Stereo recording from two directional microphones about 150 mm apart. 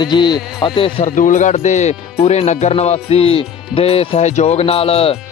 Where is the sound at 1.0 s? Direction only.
55° left (ahead or behind).